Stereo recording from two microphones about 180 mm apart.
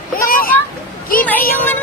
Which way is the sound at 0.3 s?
50° left (ahead or behind).